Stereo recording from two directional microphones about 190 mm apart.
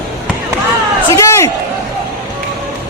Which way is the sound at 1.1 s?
15° left (ahead or behind).